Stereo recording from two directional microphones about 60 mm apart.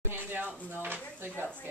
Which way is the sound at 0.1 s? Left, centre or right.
Right.